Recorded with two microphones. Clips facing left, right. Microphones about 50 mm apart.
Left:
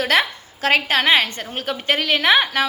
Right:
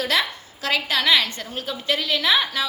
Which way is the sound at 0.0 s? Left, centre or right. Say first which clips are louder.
Left 4 dB; left.